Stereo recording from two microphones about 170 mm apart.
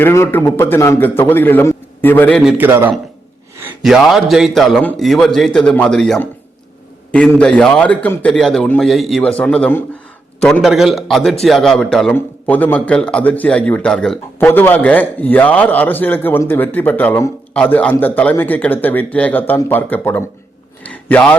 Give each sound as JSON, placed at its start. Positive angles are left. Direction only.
{"t": 0.0, "sound": "a man's voice", "side_deg": 15}
{"t": 2.4, "sound": "a man's voice", "side_deg": -10}
{"t": 3.8, "sound": "a man's voice", "side_deg": 0}
{"t": 20.8, "sound": "a sound", "side_deg": 10}